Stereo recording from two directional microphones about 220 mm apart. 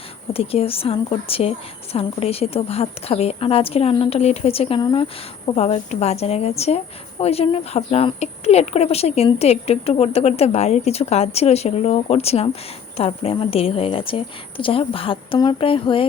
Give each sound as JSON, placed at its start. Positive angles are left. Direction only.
{"t": 0.3, "sound": "speech", "side_deg": 25}